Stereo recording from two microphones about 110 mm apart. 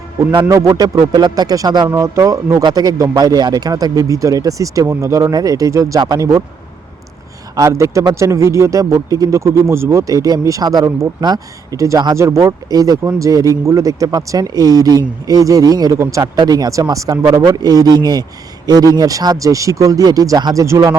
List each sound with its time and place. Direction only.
0.4 s speech: 30° right (ahead or behind)
7.5 s speech: 30° right (ahead or behind)